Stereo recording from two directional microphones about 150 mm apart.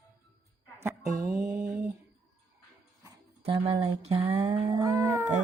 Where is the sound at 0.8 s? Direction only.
20° right (ahead or behind).